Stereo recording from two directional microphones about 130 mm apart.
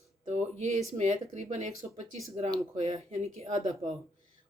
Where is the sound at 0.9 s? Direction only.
60° right (ahead or behind).